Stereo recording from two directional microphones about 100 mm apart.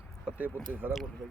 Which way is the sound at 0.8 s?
20° right (ahead or behind).